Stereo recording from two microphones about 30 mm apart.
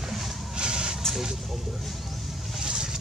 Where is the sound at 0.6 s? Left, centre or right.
Right.